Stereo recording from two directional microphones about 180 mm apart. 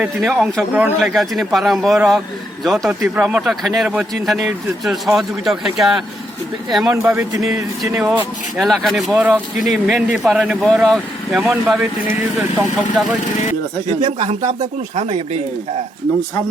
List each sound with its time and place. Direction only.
0.0 s a man's voice: centre (ahead or behind)
6.9 s speech: 15° right (ahead or behind)
8.5 s a man's voice: centre (ahead or behind)
14.0 s speech: 25° right (ahead or behind)
14.9 s speech: 40° right (ahead or behind)